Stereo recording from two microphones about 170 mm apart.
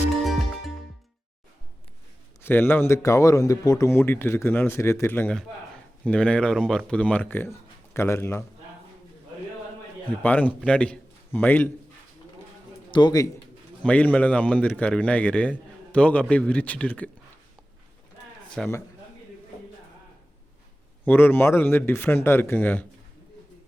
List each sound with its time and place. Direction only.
2.4 s a man's voice: 10° left (ahead or behind)
10.2 s a man's voice: 10° left (ahead or behind)
12.9 s a man's voice: 25° left (ahead or behind)
13.8 s a man's voice: 10° left (ahead or behind)
18.6 s a man's voice: centre (ahead or behind)
21.0 s a man's voice: 10° left (ahead or behind)